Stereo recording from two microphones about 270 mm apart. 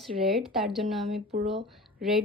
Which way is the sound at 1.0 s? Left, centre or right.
Right.